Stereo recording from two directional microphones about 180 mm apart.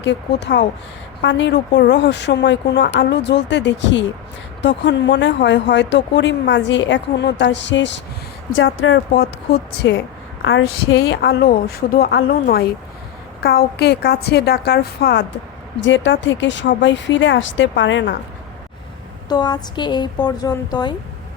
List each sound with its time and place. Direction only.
0.0 s a woman's voice: 75° left (ahead or behind)
10.4 s a woman's voice: 90° left
10.9 s a woman's voice: 75° left (ahead or behind)
15.8 s a woman's voice: 90° left
19.3 s speech: 25° left (ahead or behind)